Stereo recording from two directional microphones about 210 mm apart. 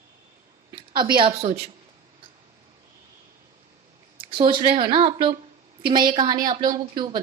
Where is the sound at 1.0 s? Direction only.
25° right (ahead or behind).